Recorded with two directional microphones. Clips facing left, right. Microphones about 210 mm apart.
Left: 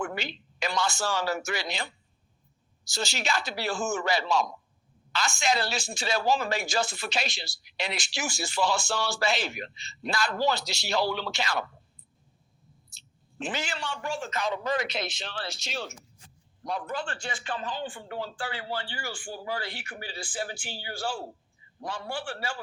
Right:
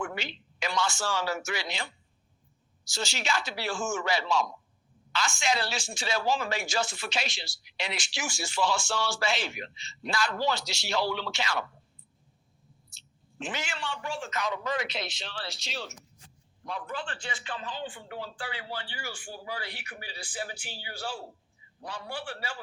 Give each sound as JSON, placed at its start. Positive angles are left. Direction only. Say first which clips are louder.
{"t": 0.0, "sound": "speech", "louder": "left 2 dB", "side_deg": 40}
{"t": 2.9, "sound": "speech", "louder": "left 1 dB", "side_deg": 40}
{"t": 13.4, "sound": "speech", "louder": "left 2 dB", "side_deg": 35}
{"t": 14.3, "sound": "a man's voice", "louder": "left 2 dB", "side_deg": 30}